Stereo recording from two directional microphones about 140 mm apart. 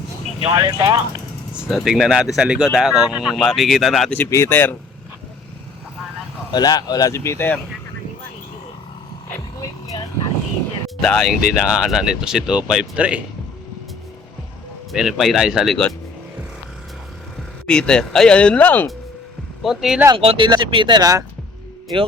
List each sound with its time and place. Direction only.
0.5 s speech: 25° right (ahead or behind)
1.7 s speech: centre (ahead or behind)
4.2 s speech: 20° left (ahead or behind)
6.5 s speech: 30° left (ahead or behind)
9.6 s vehicle: 25° left (ahead or behind)
10.8 s speech: 5° left (ahead or behind)
14.9 s speech: centre (ahead or behind)
17.7 s speech: 5° left (ahead or behind)
19.6 s speech: 5° right (ahead or behind)
20.1 s speech: 40° right (ahead or behind)